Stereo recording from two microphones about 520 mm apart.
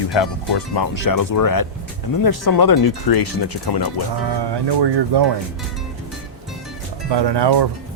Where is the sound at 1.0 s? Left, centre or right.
Left.